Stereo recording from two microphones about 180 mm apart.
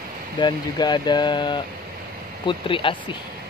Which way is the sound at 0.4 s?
25° left (ahead or behind).